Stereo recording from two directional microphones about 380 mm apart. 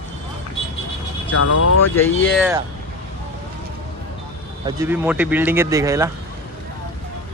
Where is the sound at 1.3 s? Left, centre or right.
Left.